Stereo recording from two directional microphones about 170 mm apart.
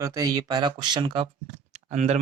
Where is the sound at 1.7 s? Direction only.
40° right (ahead or behind).